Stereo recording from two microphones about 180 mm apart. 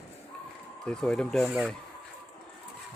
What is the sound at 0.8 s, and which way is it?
Speech, 5° left (ahead or behind).